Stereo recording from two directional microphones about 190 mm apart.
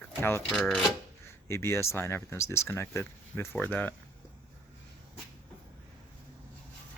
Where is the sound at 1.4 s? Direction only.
15° left (ahead or behind).